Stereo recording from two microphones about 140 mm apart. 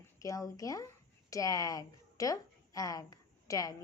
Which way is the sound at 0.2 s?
25° left (ahead or behind).